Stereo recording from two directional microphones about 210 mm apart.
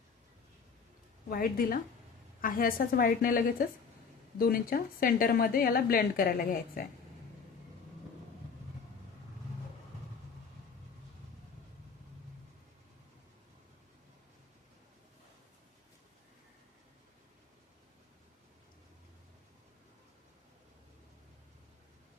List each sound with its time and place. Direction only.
1.3 s a woman's voice: 45° left (ahead or behind)